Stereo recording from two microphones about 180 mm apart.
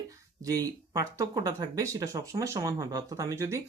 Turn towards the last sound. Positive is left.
turn(degrees=-15)  # may be behind; listen again after turning